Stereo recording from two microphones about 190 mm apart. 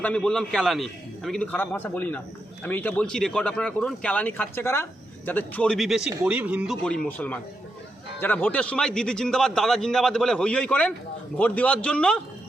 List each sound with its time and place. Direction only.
0.0 s a man's voice: 5° left (ahead or behind)
6.8 s a man's voice: 5° left (ahead or behind)